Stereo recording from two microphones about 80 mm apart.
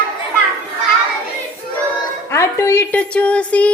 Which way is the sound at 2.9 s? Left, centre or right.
Centre.